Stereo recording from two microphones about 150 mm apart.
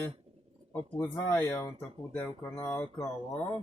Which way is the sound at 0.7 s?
15° left (ahead or behind).